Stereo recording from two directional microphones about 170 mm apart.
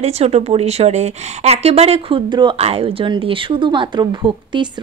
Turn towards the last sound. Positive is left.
turn(degrees=-25)  # may be behind; listen again after turning